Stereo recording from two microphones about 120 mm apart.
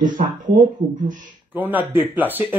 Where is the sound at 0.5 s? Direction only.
90° right.